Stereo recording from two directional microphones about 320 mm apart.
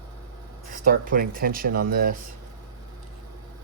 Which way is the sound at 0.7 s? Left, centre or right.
Right.